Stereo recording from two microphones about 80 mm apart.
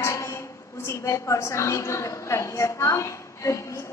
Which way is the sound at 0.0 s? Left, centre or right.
Left.